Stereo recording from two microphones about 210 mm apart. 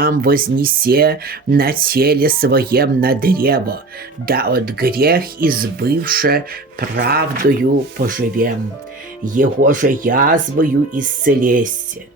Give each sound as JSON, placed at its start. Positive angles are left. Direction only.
{"t": 0.0, "sound": "speech", "side_deg": -45}